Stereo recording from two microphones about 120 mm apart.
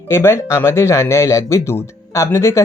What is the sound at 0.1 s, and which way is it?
Speech, 20° left (ahead or behind).